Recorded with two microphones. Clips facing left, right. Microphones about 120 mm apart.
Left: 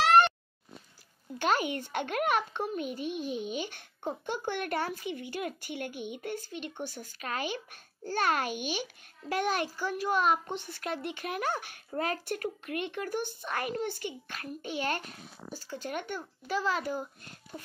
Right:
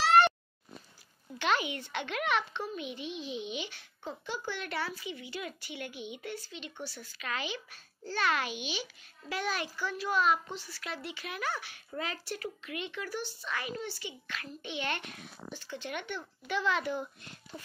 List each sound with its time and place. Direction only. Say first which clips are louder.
1.4 s a child's voice: left 2 dB; 45° left (ahead or behind)